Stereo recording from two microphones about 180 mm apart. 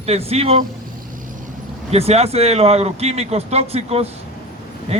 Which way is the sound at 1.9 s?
35° right (ahead or behind).